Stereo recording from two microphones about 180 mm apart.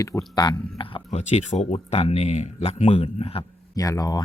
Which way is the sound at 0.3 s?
25° left (ahead or behind).